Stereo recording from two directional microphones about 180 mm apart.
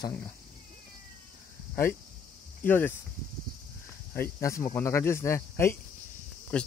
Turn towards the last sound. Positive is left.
turn(degrees=5)  # may be behind; listen again after turning